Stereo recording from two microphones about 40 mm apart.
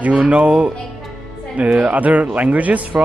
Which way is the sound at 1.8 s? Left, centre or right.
Right.